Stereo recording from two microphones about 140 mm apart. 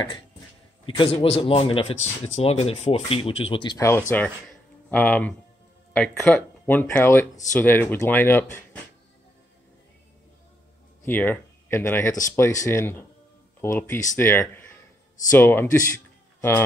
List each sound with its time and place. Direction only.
0.8 s speech: 40° left (ahead or behind)
3.7 s speech: 20° left (ahead or behind)
11.1 s speech: 15° left (ahead or behind)
14.5 s a sound: 15° left (ahead or behind)
15.3 s speech: 15° left (ahead or behind)
16.3 s a sound: 15° left (ahead or behind)